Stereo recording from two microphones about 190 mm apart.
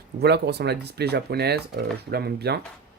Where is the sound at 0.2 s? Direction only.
60° right (ahead or behind).